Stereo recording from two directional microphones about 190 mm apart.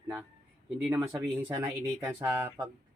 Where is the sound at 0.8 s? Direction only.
10° right (ahead or behind).